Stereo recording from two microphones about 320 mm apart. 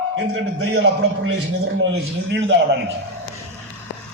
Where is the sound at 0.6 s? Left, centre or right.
Right.